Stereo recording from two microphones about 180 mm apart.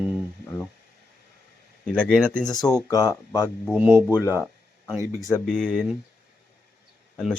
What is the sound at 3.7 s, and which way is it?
Speech, 5° right (ahead or behind).